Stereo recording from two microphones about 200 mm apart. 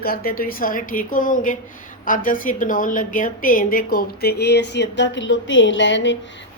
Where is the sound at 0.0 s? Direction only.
50° left (ahead or behind).